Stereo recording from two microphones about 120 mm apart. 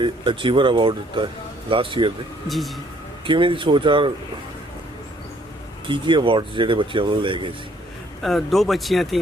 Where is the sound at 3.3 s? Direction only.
45° right (ahead or behind).